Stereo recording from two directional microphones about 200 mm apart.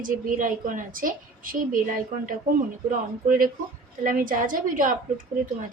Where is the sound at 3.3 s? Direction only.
45° right (ahead or behind).